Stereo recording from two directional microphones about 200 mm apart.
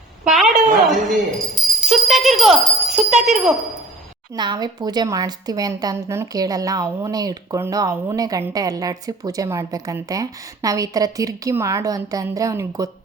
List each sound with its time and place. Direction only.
0.3 s a sound: centre (ahead or behind)
1.1 s speech: centre (ahead or behind)
4.4 s a woman's voice: 20° right (ahead or behind)